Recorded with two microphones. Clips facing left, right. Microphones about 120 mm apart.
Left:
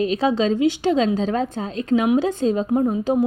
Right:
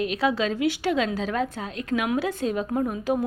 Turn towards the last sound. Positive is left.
turn(degrees=25)  # may be behind; listen again after turning